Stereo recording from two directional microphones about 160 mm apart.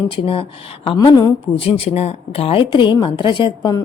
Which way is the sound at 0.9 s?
25° left (ahead or behind).